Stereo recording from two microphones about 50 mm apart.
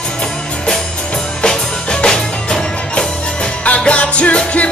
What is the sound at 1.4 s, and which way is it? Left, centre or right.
Music, centre.